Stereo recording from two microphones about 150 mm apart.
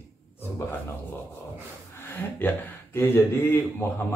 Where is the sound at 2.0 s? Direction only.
10° left (ahead or behind).